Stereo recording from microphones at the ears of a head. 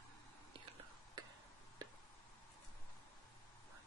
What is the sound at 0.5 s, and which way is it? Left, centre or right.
Whispering, right.